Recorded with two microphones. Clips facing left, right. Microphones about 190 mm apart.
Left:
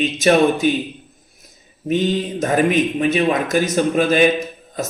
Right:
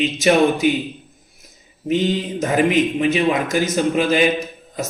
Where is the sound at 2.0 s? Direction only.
15° right (ahead or behind).